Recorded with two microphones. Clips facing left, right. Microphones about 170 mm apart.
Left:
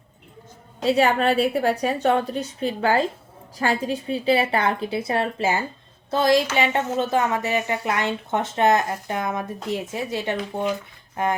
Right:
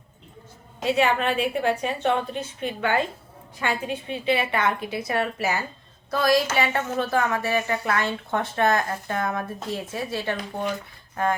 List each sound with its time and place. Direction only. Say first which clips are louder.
0.8 s a woman's voice: left 3 dB; 35° left (ahead or behind); by 10.7 s 20° left (ahead or behind)